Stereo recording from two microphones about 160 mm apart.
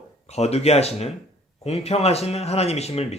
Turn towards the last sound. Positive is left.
turn(degrees=40)  # may be behind; listen again after turning